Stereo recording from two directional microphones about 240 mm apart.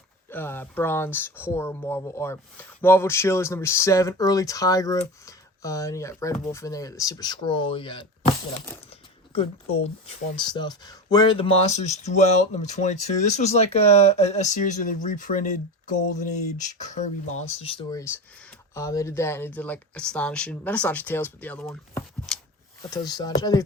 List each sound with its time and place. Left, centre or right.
0.3 s speech: centre
9.8 s speech: left
18.7 s speech: centre
22.9 s speech: centre